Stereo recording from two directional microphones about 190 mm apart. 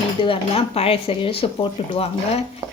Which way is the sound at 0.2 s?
30° left (ahead or behind).